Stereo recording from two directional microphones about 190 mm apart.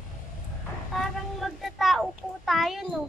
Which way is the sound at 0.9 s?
Centre (ahead or behind).